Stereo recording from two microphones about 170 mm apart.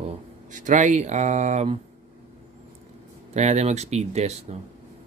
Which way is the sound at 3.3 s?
40° right (ahead or behind).